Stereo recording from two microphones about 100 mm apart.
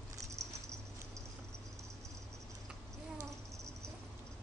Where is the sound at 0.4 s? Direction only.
30° right (ahead or behind).